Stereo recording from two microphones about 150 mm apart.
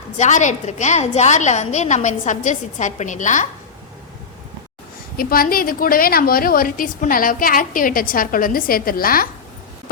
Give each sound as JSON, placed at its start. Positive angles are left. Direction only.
{"t": 0.2, "sound": "a woman's voice", "side_deg": 55}
{"t": 5.1, "sound": "a woman's voice", "side_deg": 75}